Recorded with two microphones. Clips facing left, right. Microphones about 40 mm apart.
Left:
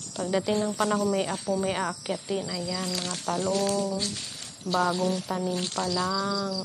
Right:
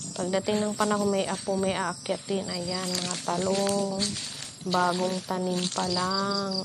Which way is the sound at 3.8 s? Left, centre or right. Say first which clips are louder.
Even; centre.